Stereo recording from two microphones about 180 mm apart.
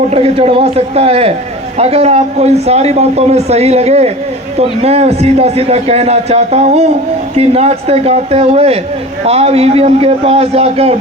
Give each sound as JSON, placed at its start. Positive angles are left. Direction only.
{"t": 0.1, "sound": "a man's voice", "side_deg": -35}